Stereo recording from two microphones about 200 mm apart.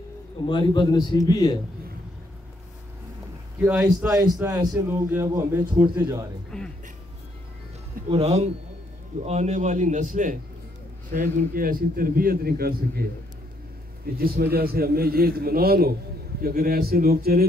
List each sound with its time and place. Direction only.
0.5 s a man's voice: 25° left (ahead or behind)
3.6 s a man's voice: 10° right (ahead or behind)
6.5 s speech: centre (ahead or behind)
8.1 s a man's voice: 30° right (ahead or behind); by 13.0 s 50° right (ahead or behind)
14.0 s a man's voice: 50° right (ahead or behind)